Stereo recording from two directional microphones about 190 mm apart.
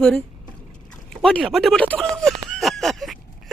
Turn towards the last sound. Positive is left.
turn(degrees=0)  # may be behind; listen again after turning